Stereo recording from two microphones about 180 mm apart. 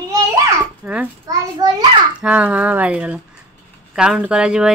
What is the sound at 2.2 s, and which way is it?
A woman's voice, 5° right (ahead or behind).